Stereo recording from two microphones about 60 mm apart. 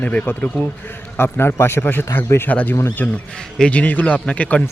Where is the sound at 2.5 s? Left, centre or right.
Left.